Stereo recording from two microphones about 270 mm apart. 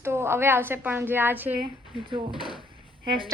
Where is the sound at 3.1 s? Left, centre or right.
Centre.